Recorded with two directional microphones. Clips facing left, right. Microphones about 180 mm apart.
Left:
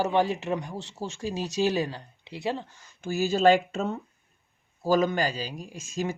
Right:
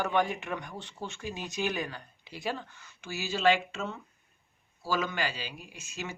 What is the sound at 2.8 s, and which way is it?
Speech, 45° left (ahead or behind).